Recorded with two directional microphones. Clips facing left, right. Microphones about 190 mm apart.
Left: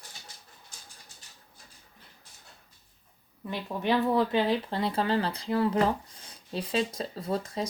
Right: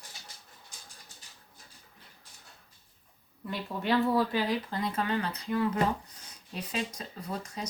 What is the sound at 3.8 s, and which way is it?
Speech, 20° left (ahead or behind).